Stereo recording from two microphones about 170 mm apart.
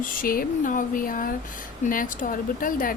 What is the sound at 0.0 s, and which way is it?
Speech, 55° left (ahead or behind).